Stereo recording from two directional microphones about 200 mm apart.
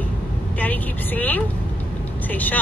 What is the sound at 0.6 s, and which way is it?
A woman's voice, 10° left (ahead or behind).